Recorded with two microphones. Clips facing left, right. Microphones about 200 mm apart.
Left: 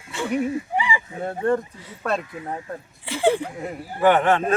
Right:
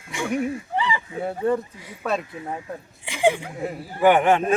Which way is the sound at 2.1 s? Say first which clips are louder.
Even; centre (ahead or behind).